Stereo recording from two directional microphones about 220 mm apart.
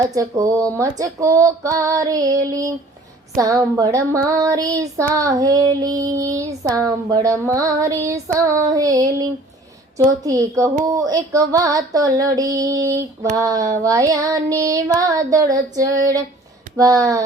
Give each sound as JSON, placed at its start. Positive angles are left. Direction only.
{"t": 0.1, "sound": "child singing", "side_deg": -15}